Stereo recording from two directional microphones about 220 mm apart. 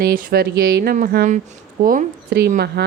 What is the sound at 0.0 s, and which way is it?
A woman's voice, 40° right (ahead or behind).